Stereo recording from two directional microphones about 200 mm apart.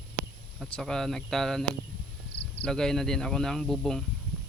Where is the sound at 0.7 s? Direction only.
5° left (ahead or behind).